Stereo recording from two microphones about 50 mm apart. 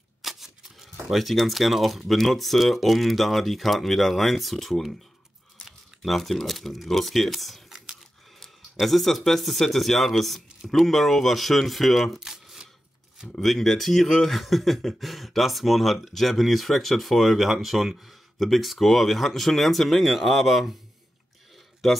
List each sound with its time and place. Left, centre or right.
0.2 s speech: centre
6.0 s speech: centre
8.8 s speech: centre
13.4 s speech: centre